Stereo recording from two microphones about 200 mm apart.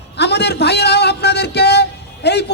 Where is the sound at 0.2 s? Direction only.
55° left (ahead or behind).